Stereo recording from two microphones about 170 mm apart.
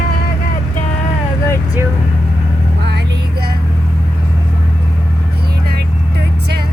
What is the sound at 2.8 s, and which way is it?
Vehicle, 75° right (ahead or behind).